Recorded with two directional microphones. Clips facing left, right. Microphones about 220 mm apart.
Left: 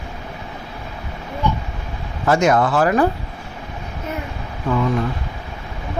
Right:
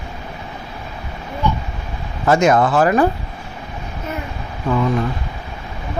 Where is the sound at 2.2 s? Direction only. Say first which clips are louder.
Right 2 dB; 20° right (ahead or behind).